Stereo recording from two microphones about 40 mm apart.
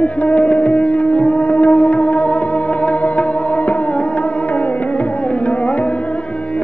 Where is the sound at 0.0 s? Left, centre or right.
Left.